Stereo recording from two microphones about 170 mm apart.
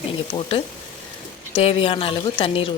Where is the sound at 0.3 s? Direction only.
35° left (ahead or behind).